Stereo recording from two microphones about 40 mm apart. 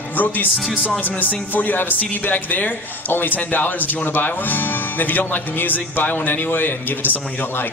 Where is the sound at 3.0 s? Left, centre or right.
Left.